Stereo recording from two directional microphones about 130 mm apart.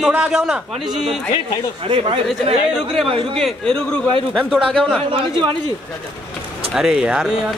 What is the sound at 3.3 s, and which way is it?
A man's voice, 5° left (ahead or behind).